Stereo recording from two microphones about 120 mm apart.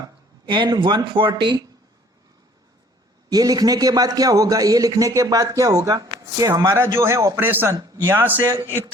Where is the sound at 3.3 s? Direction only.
30° right (ahead or behind).